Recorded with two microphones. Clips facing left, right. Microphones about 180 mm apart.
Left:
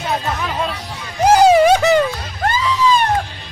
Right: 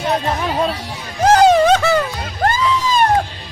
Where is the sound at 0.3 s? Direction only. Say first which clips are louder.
Right 3 dB; 35° right (ahead or behind).